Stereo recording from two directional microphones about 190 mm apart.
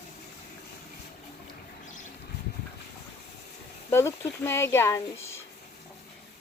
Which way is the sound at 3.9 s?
10° left (ahead or behind).